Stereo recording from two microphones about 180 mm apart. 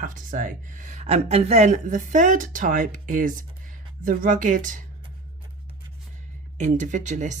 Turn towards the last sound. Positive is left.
turn(degrees=-40)  # may be behind; listen again after turning